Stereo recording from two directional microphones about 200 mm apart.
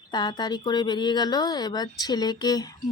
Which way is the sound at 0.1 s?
20° left (ahead or behind).